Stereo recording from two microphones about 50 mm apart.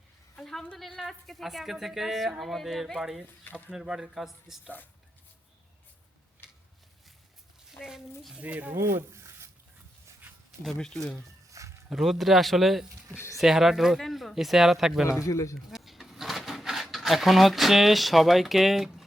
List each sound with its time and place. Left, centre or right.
0.3 s a sound: centre
0.8 s speech: centre
7.8 s a woman's voice: centre
8.4 s speech: right
8.7 s speech: right
10.8 s speech: centre
11.6 s a sound: right
11.9 s speech: centre
15.3 s speech: left
15.7 s goat: centre
16.8 s speech: centre